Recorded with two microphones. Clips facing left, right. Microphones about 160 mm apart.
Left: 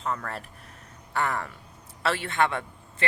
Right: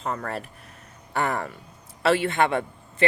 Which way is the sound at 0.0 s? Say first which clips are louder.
Right 1 dB; 40° right (ahead or behind).